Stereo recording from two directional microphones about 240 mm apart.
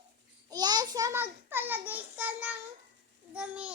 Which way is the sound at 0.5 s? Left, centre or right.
Centre.